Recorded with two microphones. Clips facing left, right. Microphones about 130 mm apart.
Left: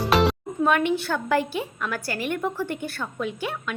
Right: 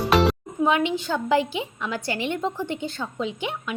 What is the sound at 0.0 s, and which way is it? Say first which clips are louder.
Music: right 1 dB; centre (ahead or behind).